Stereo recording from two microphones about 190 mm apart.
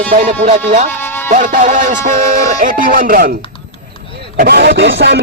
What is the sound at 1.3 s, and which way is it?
Speech, 45° right (ahead or behind).